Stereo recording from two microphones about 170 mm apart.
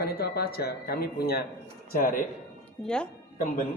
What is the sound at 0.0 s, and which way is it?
Speech, 65° left (ahead or behind).